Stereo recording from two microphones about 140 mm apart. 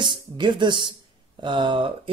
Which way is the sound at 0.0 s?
35° right (ahead or behind).